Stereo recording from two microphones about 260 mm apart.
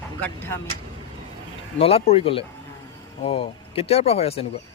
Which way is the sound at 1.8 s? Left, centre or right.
Left.